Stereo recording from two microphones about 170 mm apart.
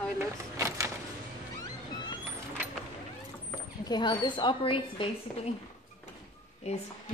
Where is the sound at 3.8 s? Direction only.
25° left (ahead or behind).